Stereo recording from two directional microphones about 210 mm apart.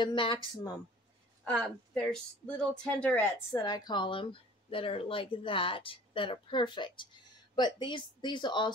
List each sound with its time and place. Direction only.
0.0 s speech: 25° left (ahead or behind)
1.4 s speech: 5° left (ahead or behind); by 8.7 s 20° left (ahead or behind)